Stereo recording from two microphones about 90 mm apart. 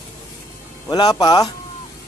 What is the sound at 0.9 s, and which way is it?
Speech, 50° left (ahead or behind).